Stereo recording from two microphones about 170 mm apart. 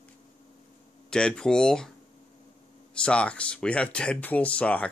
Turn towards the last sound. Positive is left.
turn(degrees=10)  # may be behind; listen again after turning